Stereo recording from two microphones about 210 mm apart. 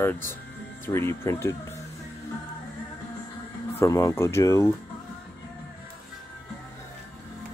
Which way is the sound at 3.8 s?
15° left (ahead or behind).